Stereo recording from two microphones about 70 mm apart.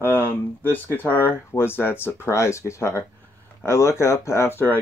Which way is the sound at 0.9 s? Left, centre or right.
Left.